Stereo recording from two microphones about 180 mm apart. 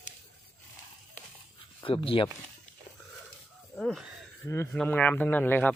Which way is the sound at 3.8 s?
Centre (ahead or behind).